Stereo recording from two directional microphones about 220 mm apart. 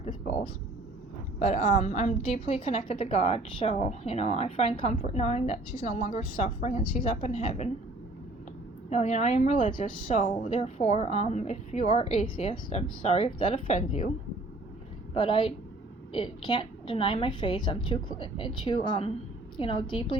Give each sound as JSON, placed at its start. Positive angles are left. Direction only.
{"t": 1.4, "sound": "a woman's voice", "side_deg": 30}
{"t": 8.9, "sound": "a woman's voice", "side_deg": 30}
{"t": 15.1, "sound": "a woman's voice", "side_deg": 20}